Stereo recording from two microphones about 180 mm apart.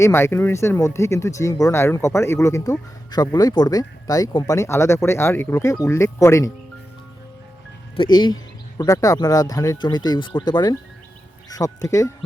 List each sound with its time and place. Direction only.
0.0 s speech: 15° left (ahead or behind)
7.9 s speech: 25° left (ahead or behind)